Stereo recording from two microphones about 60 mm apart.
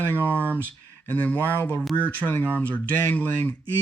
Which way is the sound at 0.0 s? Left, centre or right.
Left.